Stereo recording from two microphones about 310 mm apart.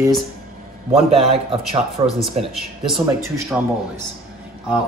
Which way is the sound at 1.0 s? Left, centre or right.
Centre.